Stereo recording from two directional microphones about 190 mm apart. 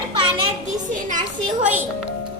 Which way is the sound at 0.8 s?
40° right (ahead or behind).